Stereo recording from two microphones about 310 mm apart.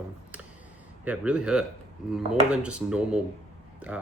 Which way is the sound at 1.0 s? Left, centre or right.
Centre.